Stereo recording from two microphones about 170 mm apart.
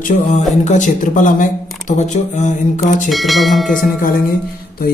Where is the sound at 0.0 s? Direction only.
45° left (ahead or behind).